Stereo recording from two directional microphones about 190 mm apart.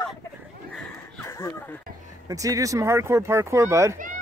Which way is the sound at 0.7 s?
10° left (ahead or behind).